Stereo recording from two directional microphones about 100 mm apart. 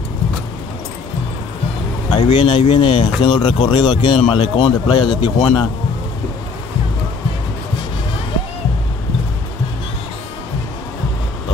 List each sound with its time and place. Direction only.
2.0 s a man's voice: 55° left (ahead or behind)
4.2 s a man's voice: 65° left (ahead or behind)